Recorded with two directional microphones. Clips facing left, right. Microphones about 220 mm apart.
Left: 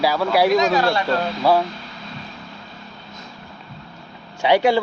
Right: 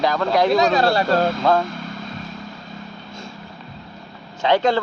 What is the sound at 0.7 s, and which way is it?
Speech, 35° right (ahead or behind).